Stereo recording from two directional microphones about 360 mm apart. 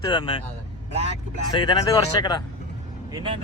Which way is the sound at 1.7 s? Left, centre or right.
Centre.